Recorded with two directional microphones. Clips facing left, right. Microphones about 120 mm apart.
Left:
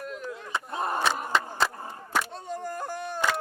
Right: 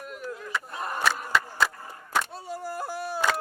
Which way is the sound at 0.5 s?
25° left (ahead or behind).